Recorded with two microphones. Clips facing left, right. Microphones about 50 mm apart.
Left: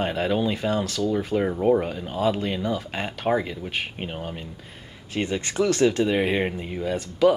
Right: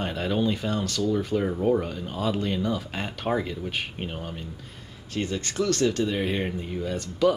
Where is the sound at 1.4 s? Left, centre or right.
Centre.